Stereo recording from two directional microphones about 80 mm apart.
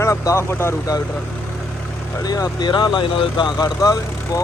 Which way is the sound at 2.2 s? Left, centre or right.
Left.